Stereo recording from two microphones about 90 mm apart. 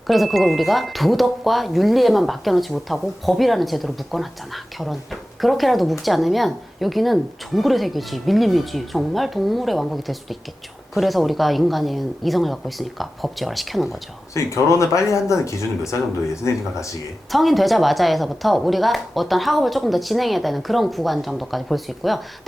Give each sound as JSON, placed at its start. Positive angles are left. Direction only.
{"t": 0.1, "sound": "speech", "side_deg": 0}
{"t": 14.3, "sound": "speech", "side_deg": 35}
{"t": 17.3, "sound": "speech", "side_deg": 0}